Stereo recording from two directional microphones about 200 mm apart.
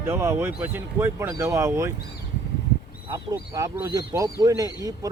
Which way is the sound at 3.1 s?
15° right (ahead or behind).